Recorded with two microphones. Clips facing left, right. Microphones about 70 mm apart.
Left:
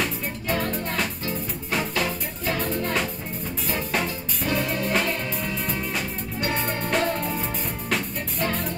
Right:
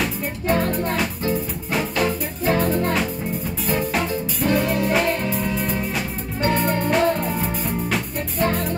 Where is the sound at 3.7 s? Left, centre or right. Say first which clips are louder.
Right 5 dB; centre.